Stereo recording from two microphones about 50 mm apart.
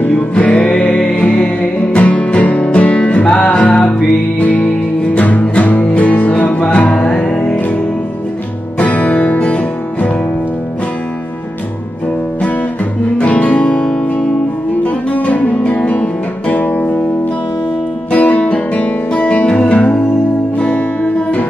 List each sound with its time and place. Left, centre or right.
0.1 s music: left
8.7 s music: left
13.2 s guitar: left
18.1 s guitar: left